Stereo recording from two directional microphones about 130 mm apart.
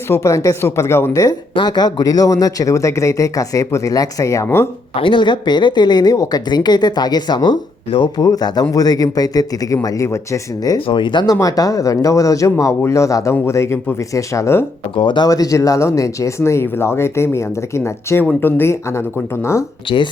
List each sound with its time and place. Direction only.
0.1 s speech: 25° left (ahead or behind)
4.9 s speech: 40° left (ahead or behind)
10.8 s speech: 40° left (ahead or behind); by 14.6 s 25° left (ahead or behind)
14.9 s speech: 35° left (ahead or behind); by 19.6 s 20° left (ahead or behind)